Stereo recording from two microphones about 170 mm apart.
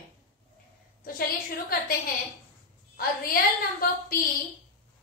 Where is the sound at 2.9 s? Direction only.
60° left (ahead or behind).